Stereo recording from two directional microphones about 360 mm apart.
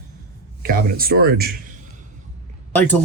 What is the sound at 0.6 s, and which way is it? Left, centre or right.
Speech, right.